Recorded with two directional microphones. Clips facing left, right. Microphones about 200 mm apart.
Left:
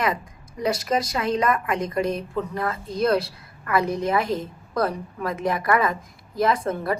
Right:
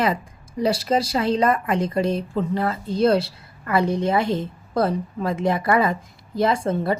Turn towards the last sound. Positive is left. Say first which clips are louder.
# right 2 dB
turn(degrees=-30)  # may be behind; listen again after turning